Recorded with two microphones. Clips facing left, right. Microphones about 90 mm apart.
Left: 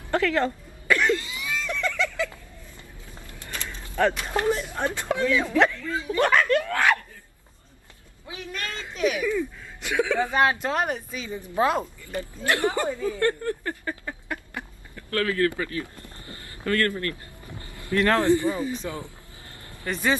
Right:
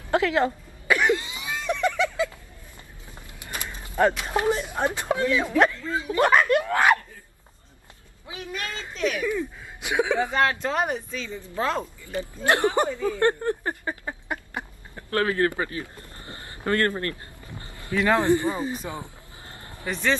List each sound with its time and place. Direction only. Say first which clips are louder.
0.1 s cough: right 1 dB; 20° right (ahead or behind)
3.3 s mechanisms: right 1 dB; 15° right (ahead or behind)
4.2 s speech: right 1 dB; 10° right (ahead or behind)
8.3 s speech: right 1 dB; 15° right (ahead or behind)
8.9 s a woman's voice: left 2 dB; 5° left (ahead or behind)
9.3 s speech: left 1 dB; 15° right (ahead or behind)
10.3 s a woman's voice: left 1 dB; 10° left (ahead or behind)
10.7 s speech: even; centre (ahead or behind)
11.1 s a woman's voice: even; 15° left (ahead or behind)
12.4 s speech: right 3 dB; 20° right (ahead or behind)
17.0 s a sound: even; 30° right (ahead or behind)
18.1 s speech: right 1 dB; 20° right (ahead or behind)
19.9 s a woman's voice: even; 10° left (ahead or behind)